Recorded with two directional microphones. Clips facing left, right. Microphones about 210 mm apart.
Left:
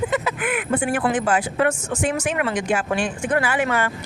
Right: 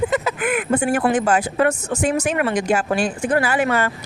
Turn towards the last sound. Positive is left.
turn(degrees=-40)  # may be behind; listen again after turning